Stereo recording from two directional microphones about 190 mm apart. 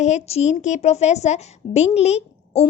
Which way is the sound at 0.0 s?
35° left (ahead or behind).